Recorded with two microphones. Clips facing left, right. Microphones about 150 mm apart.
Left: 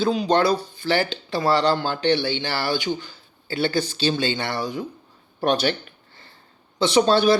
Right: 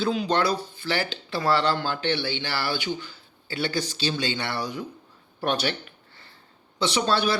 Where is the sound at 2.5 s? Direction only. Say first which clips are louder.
Left 4 dB; 45° left (ahead or behind).